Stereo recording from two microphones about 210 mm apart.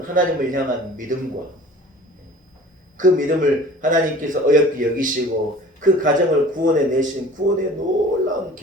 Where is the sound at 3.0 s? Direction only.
40° right (ahead or behind).